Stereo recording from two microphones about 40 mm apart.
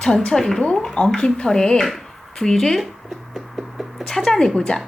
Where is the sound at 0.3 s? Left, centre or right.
Centre.